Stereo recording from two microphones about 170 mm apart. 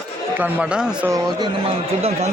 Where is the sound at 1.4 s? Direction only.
35° right (ahead or behind).